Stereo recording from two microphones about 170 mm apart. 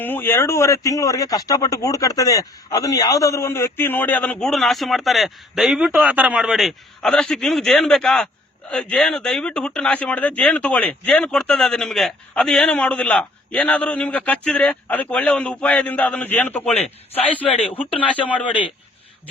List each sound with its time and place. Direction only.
0.0 s speech: 10° left (ahead or behind)
16.7 s speech: 35° left (ahead or behind)
17.7 s speech: 10° left (ahead or behind)